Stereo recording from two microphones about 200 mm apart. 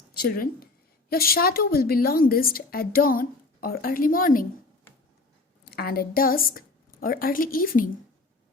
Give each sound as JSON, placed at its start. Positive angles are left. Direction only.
{"t": 0.1, "sound": "a woman's voice", "side_deg": 50}
{"t": 5.6, "sound": "a woman's voice", "side_deg": 50}